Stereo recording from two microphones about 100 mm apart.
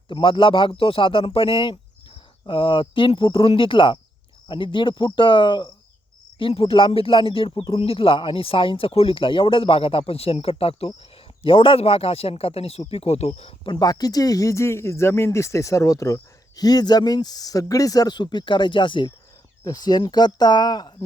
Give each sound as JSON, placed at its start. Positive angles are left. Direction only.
{"t": 0.1, "sound": "speech", "side_deg": 55}
{"t": 6.4, "sound": "speech", "side_deg": 75}
{"t": 13.7, "sound": "speech", "side_deg": 40}
{"t": 19.6, "sound": "speech", "side_deg": 45}